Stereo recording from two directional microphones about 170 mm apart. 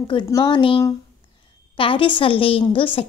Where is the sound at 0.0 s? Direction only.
30° left (ahead or behind).